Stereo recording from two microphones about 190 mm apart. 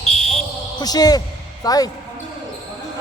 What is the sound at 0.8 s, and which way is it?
A man's voice, 20° left (ahead or behind).